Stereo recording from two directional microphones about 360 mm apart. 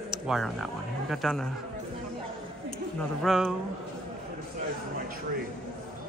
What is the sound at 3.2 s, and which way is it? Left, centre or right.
Speech, centre.